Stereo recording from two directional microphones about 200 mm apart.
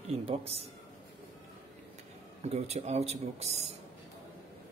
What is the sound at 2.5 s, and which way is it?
Speech, 30° right (ahead or behind).